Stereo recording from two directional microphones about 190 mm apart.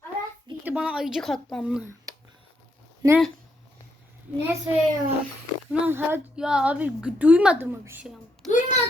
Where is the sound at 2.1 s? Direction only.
20° right (ahead or behind).